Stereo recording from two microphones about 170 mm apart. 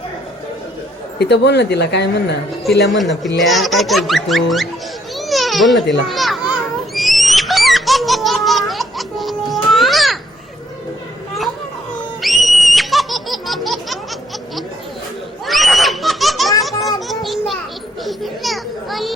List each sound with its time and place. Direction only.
1.2 s speech: 80° left
3.4 s speech: centre (ahead or behind)
5.1 s a sound: centre (ahead or behind)
6.1 s children playing: centre (ahead or behind)
6.9 s baby laughter: centre (ahead or behind)
12.2 s baby laughter: centre (ahead or behind)
15.4 s belly laugh: centre (ahead or behind)
17.1 s a sound: centre (ahead or behind)
18.0 s children playing: centre (ahead or behind)